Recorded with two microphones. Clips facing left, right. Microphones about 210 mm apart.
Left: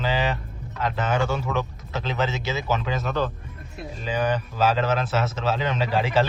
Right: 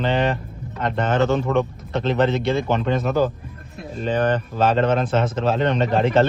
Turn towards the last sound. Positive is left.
turn(degrees=5)  # may be behind; listen again after turning